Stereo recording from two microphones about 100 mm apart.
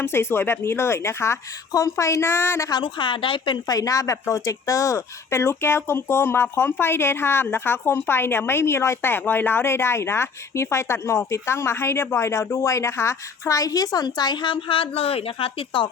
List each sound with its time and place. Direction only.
0.0 s speech: 25° left (ahead or behind)
2.8 s a woman's voice: 55° left (ahead or behind)
3.7 s speech: 35° left (ahead or behind); by 15.9 s 60° left (ahead or behind)